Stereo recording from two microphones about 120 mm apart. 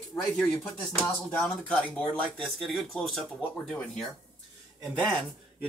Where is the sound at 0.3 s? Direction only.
5° left (ahead or behind).